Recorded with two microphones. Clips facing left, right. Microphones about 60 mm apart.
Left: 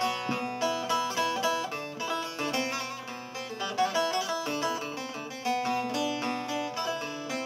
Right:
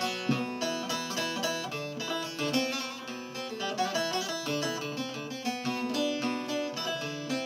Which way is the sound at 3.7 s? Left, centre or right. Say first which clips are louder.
Left 4 dB; left.